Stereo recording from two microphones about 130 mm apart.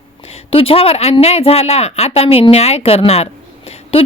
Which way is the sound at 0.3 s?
50° left (ahead or behind).